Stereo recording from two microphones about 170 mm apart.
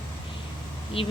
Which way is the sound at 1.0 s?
35° left (ahead or behind).